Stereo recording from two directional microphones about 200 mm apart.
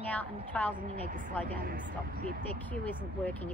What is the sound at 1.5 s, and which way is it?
Speech, 40° right (ahead or behind).